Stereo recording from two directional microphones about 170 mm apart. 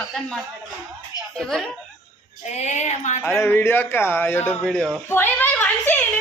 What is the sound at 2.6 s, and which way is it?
Speech, 40° left (ahead or behind).